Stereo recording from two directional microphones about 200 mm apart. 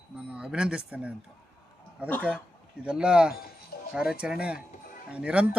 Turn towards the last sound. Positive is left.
turn(degrees=-5)  # may be behind; listen again after turning